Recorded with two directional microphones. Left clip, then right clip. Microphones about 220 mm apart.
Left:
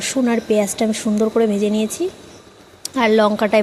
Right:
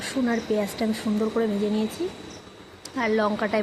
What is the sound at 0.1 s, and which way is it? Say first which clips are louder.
Speech: left 7 dB; 35° left (ahead or behind).